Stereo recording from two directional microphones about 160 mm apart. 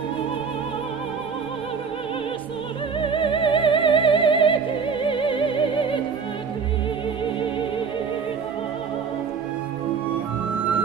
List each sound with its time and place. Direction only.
3.0 s music: 30° left (ahead or behind)